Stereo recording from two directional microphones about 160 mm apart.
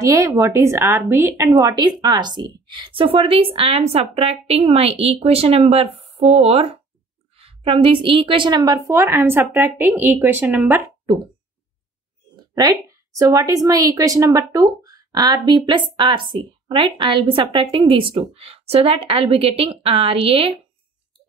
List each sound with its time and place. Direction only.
0.0 s a woman's voice: 20° right (ahead or behind)
12.4 s a sound: 25° right (ahead or behind)
13.2 s speech: 20° right (ahead or behind); by 20.6 s 35° right (ahead or behind)